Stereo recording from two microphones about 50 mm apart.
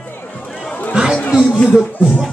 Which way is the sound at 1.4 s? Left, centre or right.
Left.